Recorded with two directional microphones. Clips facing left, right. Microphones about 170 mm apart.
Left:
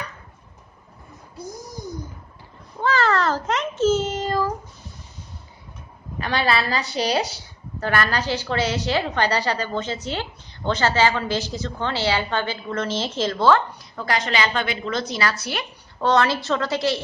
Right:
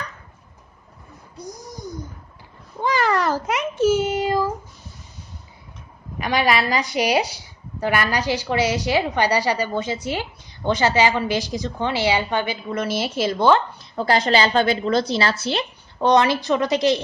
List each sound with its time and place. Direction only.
1.4 s a child's voice: centre (ahead or behind)
2.8 s meow: 15° right (ahead or behind)
6.1 s a woman's voice: 15° right (ahead or behind)
13.9 s a woman's voice: 30° right (ahead or behind)